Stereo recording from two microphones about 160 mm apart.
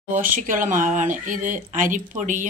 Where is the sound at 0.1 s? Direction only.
60° right (ahead or behind).